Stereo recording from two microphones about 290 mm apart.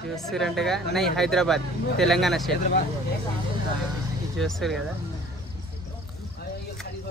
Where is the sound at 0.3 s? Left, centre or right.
Centre.